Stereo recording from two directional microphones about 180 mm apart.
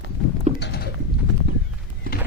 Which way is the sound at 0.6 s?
60° left (ahead or behind).